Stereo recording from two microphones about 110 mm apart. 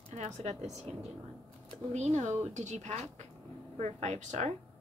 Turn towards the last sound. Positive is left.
turn(degrees=-85)